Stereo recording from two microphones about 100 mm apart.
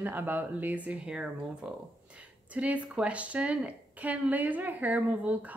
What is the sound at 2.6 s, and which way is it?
A woman's voice, 15° right (ahead or behind).